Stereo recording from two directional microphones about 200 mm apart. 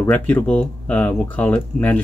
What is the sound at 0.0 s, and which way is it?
Speech, 10° left (ahead or behind).